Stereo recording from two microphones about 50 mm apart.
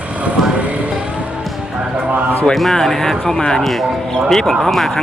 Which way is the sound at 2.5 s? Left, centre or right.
Centre.